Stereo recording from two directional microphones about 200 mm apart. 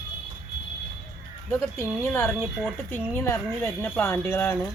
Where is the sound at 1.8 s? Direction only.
10° left (ahead or behind).